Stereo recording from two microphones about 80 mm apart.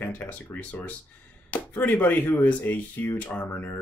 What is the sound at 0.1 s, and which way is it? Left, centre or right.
Speech, left.